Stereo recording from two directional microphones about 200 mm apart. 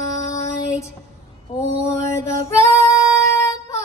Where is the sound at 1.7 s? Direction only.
15° left (ahead or behind).